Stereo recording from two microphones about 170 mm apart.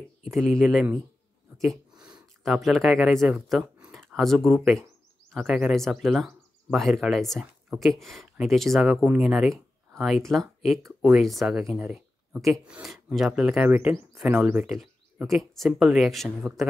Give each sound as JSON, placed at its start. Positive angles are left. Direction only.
{"t": 0.2, "sound": "speech", "side_deg": 0}
{"t": 2.0, "sound": "a sound", "side_deg": -25}
{"t": 2.4, "sound": "speech", "side_deg": 0}
{"t": 8.9, "sound": "speech", "side_deg": -10}
{"t": 11.8, "sound": "a sound", "side_deg": -10}
{"t": 12.4, "sound": "speech", "side_deg": -5}